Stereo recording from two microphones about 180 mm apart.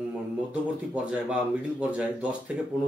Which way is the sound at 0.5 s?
5° right (ahead or behind).